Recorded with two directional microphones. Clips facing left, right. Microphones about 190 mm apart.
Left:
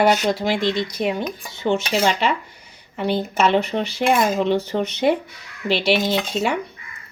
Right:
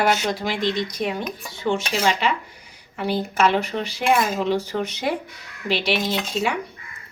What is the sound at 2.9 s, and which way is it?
A woman's voice, 25° left (ahead or behind).